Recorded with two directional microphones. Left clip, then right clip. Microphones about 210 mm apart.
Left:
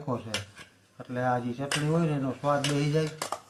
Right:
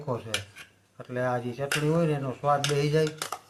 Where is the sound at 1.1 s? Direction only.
60° right (ahead or behind).